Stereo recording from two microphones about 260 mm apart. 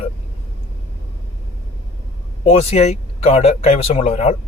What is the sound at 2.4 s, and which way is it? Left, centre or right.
Speech, left.